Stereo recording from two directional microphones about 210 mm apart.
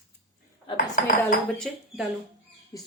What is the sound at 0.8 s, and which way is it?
Speech, 40° left (ahead or behind).